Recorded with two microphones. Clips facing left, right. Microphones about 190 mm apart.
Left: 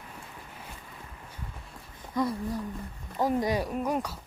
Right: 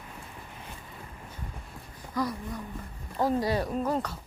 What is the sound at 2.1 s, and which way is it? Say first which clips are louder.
Speech: left 2 dB; 25° left (ahead or behind).